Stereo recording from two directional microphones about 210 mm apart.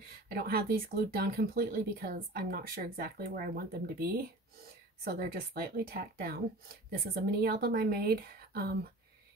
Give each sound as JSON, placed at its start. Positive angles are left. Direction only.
{"t": 0.3, "sound": "speech", "side_deg": -45}